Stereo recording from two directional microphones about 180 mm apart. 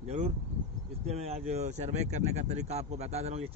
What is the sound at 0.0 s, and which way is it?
Speech, 35° right (ahead or behind).